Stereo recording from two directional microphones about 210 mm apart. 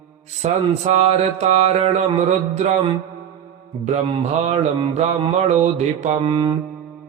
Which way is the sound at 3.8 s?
35° right (ahead or behind).